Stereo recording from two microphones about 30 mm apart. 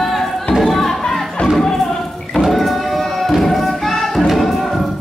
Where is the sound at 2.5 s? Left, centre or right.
Centre.